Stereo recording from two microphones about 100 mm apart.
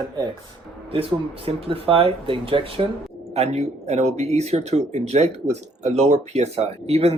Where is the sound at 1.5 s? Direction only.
70° right (ahead or behind).